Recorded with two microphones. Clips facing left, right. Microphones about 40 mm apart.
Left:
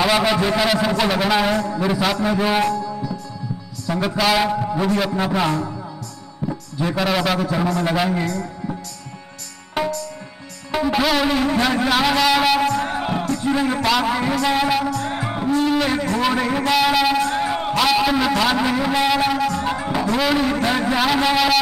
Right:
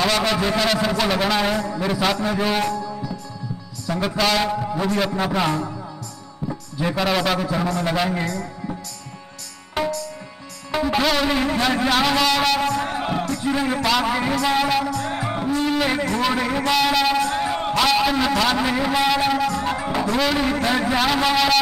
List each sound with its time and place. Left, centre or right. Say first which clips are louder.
0.0 s a man's voice: left 3 dB; centre
6.8 s a man's voice: left 1 dB; centre
9.8 s music: left 1 dB; centre
15.9 s a sound: left 1 dB; centre
16.2 s a man's voice: left 2 dB; centre